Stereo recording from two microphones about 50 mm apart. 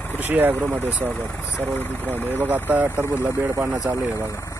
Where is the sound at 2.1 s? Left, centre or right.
Right.